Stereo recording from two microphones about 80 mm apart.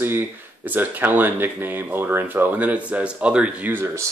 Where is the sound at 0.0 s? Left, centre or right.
Right.